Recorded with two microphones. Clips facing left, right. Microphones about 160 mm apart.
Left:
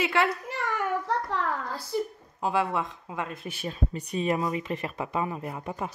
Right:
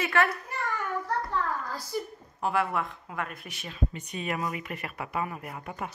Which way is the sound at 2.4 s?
20° left (ahead or behind).